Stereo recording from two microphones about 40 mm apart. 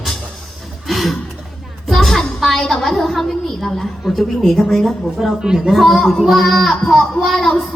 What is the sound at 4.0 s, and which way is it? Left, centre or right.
Speech, centre.